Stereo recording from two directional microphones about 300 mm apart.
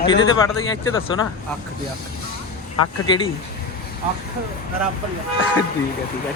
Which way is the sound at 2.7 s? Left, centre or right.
Left.